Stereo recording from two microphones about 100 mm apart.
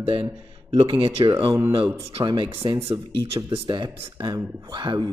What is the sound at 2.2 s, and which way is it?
Speech, 45° right (ahead or behind).